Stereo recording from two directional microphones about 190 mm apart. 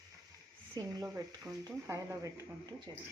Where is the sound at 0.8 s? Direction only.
15° right (ahead or behind).